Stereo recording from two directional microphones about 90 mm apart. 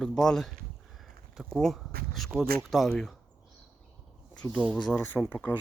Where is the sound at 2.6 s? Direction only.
Centre (ahead or behind).